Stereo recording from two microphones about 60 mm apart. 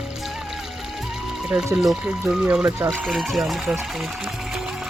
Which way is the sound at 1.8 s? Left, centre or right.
Centre.